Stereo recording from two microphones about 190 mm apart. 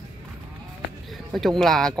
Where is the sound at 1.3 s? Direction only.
Centre (ahead or behind).